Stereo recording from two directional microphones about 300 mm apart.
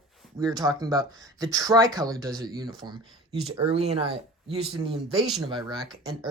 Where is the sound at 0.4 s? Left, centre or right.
Centre.